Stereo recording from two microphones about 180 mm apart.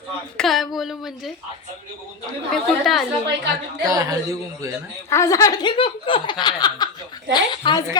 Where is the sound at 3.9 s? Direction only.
20° right (ahead or behind).